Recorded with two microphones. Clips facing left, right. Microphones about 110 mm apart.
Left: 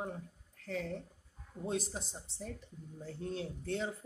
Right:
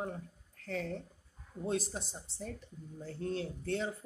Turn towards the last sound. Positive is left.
turn(degrees=15)  # may be behind; listen again after turning